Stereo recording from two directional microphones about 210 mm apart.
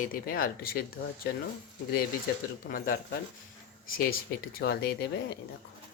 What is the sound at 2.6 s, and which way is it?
Speech, 40° left (ahead or behind).